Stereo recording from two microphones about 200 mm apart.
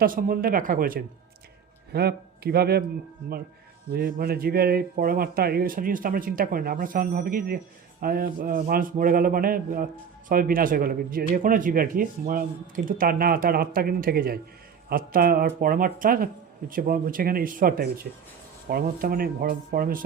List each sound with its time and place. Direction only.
0.0 s a man's voice: 45° right (ahead or behind)
3.9 s a man's voice: 50° right (ahead or behind)